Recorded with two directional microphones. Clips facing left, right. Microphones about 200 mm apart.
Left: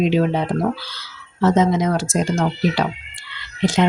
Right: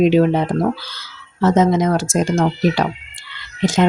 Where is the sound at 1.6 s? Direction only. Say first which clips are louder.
Right 2 dB; 50° right (ahead or behind).